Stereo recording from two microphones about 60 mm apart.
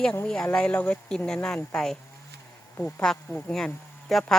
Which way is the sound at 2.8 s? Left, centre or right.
Left.